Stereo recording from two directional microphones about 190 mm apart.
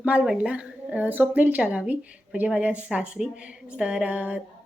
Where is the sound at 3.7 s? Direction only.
5° right (ahead or behind).